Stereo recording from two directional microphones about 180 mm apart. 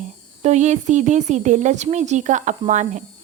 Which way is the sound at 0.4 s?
40° right (ahead or behind).